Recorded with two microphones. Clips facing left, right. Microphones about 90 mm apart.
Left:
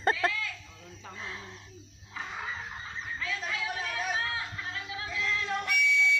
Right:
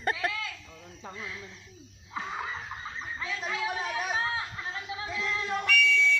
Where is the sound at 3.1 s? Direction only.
25° right (ahead or behind).